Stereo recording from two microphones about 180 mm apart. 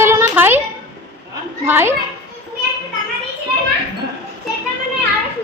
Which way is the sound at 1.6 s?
10° right (ahead or behind).